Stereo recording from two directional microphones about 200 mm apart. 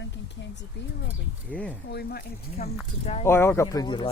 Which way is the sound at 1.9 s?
50° left (ahead or behind).